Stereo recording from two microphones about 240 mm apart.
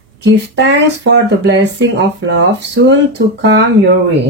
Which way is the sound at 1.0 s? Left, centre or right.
Right.